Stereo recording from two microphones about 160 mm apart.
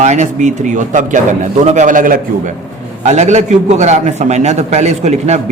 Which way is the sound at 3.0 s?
45° right (ahead or behind).